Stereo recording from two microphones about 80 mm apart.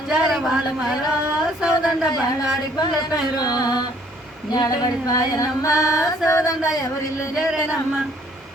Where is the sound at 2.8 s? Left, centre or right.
Left.